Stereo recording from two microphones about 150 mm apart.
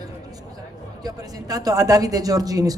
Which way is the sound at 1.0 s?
25° right (ahead or behind).